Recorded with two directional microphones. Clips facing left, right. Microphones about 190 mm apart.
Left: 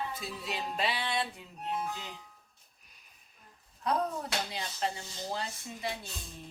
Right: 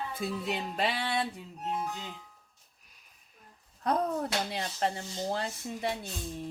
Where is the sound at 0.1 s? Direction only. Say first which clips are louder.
Right 5 dB; 55° right (ahead or behind).